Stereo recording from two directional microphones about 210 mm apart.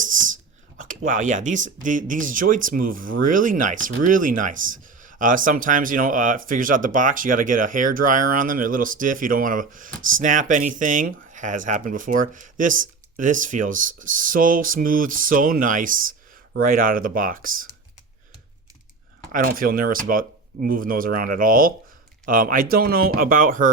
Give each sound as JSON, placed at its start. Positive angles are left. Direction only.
{"t": 0.9, "sound": "speech", "side_deg": -40}
{"t": 19.3, "sound": "speech", "side_deg": -40}